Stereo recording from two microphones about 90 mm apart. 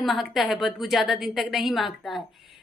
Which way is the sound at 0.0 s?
Centre (ahead or behind).